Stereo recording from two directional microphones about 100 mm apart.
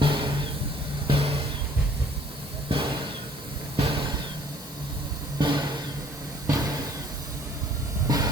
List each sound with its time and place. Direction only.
0.0 s vehicle: 55° right (ahead or behind)
1.0 s music: 70° right (ahead or behind)
2.7 s vehicle: 65° right (ahead or behind)
3.8 s a sound: 60° right (ahead or behind)
5.4 s vehicle: 50° right (ahead or behind)
8.0 s hiss: 35° right (ahead or behind)